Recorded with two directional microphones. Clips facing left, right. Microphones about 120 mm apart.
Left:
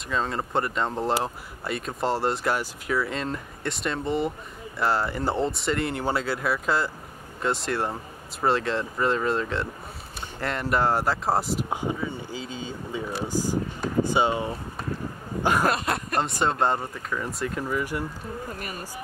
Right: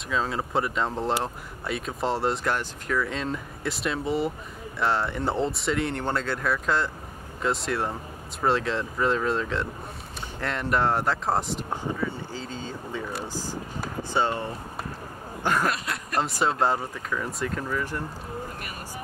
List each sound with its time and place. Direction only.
0.1 s speech: centre (ahead or behind)
15.7 s speech: 50° left (ahead or behind)
16.2 s speech: centre (ahead or behind)